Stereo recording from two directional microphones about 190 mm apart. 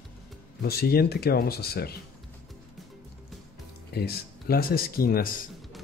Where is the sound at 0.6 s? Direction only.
55° left (ahead or behind).